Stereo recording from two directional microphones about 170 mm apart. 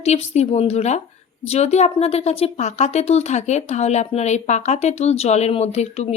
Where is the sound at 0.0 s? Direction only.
40° left (ahead or behind).